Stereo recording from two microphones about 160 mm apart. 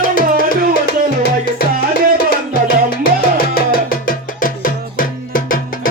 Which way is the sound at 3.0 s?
70° left (ahead or behind).